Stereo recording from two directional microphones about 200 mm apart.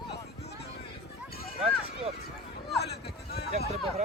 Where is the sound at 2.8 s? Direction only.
55° left (ahead or behind).